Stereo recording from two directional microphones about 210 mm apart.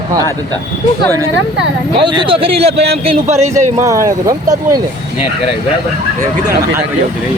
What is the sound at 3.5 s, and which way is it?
Speech, 15° right (ahead or behind).